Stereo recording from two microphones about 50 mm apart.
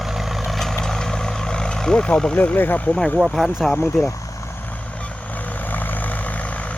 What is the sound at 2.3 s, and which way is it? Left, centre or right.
Speech, left.